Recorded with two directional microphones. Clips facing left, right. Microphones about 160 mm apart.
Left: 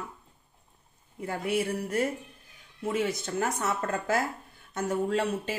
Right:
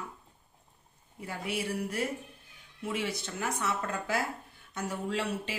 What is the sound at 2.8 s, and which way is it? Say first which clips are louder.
Speech: left 5 dB; 45° left (ahead or behind).